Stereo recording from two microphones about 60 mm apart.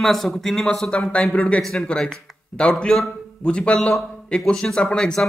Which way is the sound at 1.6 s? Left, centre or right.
Centre.